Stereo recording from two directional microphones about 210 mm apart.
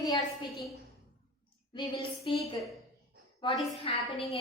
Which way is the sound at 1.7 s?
20° left (ahead or behind).